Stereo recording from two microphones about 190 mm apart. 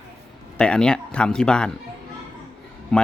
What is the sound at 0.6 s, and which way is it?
A man's voice, 5° left (ahead or behind).